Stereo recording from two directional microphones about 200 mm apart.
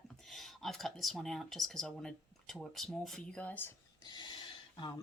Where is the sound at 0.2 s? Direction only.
Centre (ahead or behind).